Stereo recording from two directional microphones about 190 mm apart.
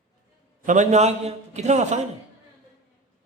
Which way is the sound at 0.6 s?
40° right (ahead or behind).